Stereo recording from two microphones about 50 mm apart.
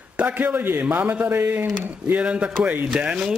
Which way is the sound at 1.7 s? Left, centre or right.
Right.